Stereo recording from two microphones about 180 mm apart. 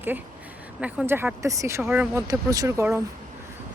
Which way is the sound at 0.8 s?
5° right (ahead or behind).